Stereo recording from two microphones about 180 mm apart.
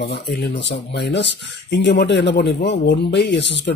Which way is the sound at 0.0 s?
70° left (ahead or behind).